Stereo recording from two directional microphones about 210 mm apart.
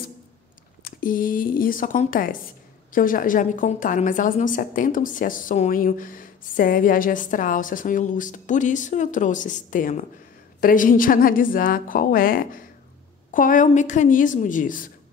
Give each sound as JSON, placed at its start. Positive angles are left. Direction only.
{"t": 0.8, "sound": "a woman's voice", "side_deg": 40}